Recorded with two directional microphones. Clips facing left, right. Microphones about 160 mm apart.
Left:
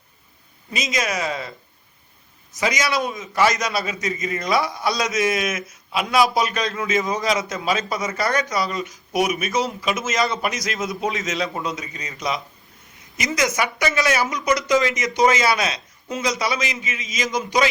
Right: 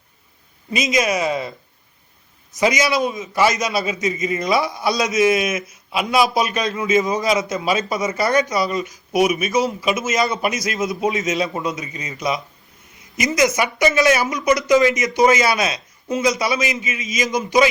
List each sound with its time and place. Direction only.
0.7 s a man's voice: 15° right (ahead or behind)
2.6 s a man's voice: 15° right (ahead or behind)
13.3 s a man's voice: 10° right (ahead or behind)
16.6 s a man's voice: 35° left (ahead or behind)
17.3 s a man's voice: 10° right (ahead or behind)